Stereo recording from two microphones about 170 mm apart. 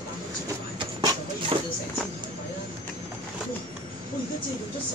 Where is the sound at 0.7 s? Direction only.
30° right (ahead or behind).